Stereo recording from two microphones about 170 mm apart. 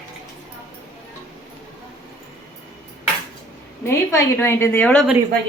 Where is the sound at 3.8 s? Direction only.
15° left (ahead or behind).